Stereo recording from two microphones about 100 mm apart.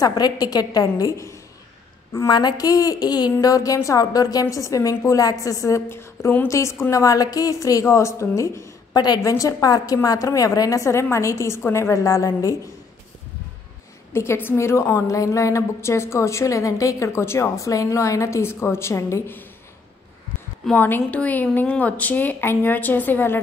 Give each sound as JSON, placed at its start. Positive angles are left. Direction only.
{"t": 0.0, "sound": "a woman's voice", "side_deg": 40}
{"t": 2.1, "sound": "a woman's voice", "side_deg": 45}
{"t": 8.9, "sound": "a woman's voice", "side_deg": 45}
{"t": 9.3, "sound": "a woman's voice", "side_deg": 30}
{"t": 14.1, "sound": "a woman's voice", "side_deg": 25}
{"t": 20.7, "sound": "a woman's voice", "side_deg": 20}